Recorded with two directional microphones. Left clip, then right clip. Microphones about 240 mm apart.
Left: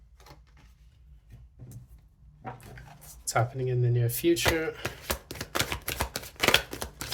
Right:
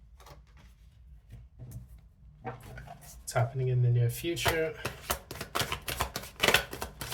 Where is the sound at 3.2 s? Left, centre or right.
Left.